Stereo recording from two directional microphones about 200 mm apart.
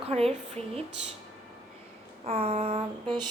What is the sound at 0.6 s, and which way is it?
Speech, 5° left (ahead or behind).